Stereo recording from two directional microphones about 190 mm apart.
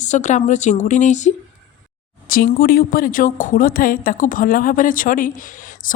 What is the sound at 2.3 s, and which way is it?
A woman's voice, 50° left (ahead or behind).